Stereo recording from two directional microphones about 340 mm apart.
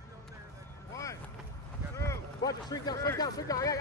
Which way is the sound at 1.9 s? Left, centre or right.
Centre.